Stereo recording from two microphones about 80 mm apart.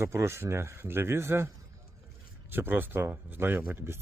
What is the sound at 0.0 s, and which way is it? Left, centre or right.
A man's voice, right.